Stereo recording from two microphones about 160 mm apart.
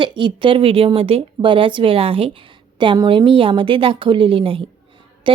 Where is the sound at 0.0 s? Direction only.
30° right (ahead or behind).